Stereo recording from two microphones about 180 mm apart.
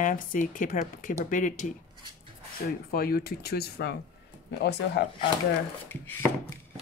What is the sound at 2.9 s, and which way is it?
Speech, 55° left (ahead or behind).